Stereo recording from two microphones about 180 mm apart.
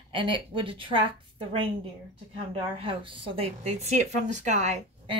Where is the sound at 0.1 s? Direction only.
30° right (ahead or behind).